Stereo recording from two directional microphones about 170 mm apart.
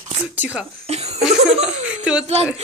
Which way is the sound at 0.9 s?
40° right (ahead or behind).